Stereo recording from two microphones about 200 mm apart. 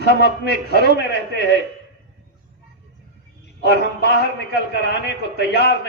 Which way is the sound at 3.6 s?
60° left (ahead or behind).